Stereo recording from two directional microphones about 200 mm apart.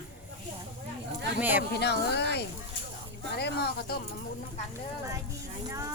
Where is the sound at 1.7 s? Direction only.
55° left (ahead or behind).